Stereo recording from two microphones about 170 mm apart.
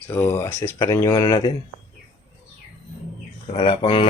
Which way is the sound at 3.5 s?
30° left (ahead or behind).